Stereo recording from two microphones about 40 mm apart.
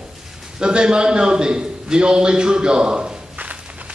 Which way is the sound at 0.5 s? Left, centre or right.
Right.